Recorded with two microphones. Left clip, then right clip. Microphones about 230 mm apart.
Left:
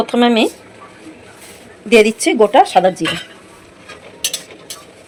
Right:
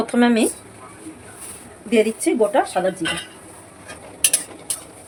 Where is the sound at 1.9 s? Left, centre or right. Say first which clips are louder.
Left 7 dB; left.